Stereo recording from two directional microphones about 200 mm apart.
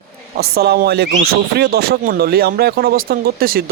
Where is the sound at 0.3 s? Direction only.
50° right (ahead or behind).